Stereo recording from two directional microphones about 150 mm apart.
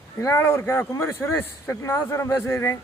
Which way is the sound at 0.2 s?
20° left (ahead or behind).